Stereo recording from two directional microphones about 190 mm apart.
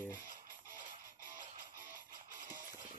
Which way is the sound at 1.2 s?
45° right (ahead or behind).